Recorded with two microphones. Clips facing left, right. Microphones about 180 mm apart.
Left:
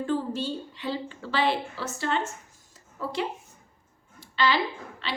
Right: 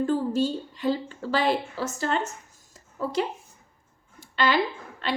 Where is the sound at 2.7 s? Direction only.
45° right (ahead or behind).